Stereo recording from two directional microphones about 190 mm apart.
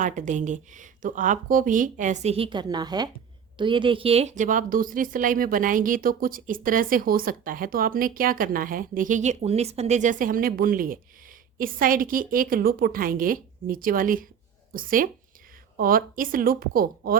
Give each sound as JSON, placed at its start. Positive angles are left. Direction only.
{"t": 0.0, "sound": "a woman's voice", "side_deg": -40}